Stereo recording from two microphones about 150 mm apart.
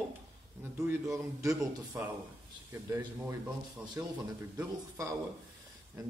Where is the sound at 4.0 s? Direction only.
15° right (ahead or behind).